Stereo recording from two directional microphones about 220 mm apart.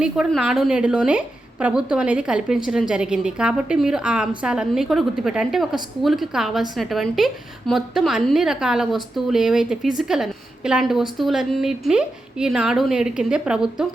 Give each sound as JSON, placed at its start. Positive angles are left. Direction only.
{"t": 0.0, "sound": "a woman's voice", "side_deg": 0}